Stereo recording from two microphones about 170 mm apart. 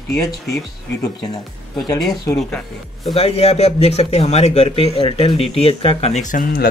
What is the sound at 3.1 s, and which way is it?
A man's voice, 35° left (ahead or behind).